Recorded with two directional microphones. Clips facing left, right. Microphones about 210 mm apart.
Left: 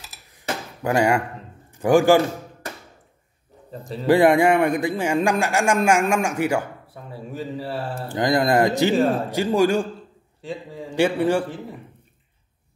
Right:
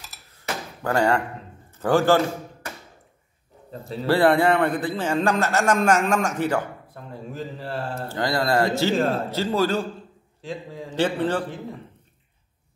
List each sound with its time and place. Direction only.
0.3 s a sound: 15° left (ahead or behind)
1.7 s a man's voice: 15° left (ahead or behind)
4.0 s a man's voice: 15° left (ahead or behind)
8.1 s a man's voice: 15° left (ahead or behind)
10.4 s a man's voice: centre (ahead or behind)
10.9 s a man's voice: 10° left (ahead or behind)